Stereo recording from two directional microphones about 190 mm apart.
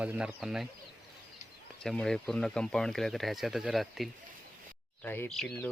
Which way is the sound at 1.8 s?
Centre (ahead or behind).